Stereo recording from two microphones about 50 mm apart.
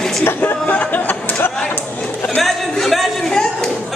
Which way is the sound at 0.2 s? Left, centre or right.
Left.